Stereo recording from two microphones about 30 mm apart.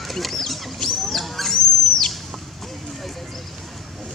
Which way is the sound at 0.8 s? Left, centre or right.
Centre.